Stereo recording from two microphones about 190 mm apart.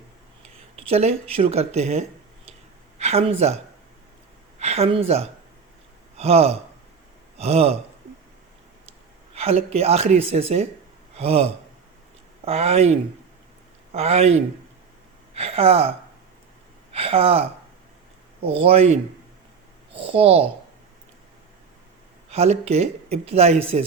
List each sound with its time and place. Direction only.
0.8 s speech: 30° right (ahead or behind)
4.6 s speech: 35° right (ahead or behind)
9.3 s speech: 35° right (ahead or behind)
15.4 s speech: 30° right (ahead or behind)
18.4 s speech: 30° right (ahead or behind)
22.3 s speech: 35° right (ahead or behind)